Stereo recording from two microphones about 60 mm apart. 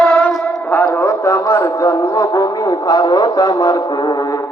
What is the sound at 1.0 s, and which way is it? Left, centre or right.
A man's voice, left.